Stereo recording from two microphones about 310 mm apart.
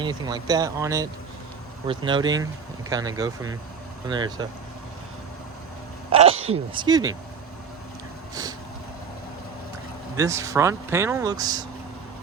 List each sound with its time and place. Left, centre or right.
0.0 s speech: centre
6.1 s speech: centre
10.2 s speech: centre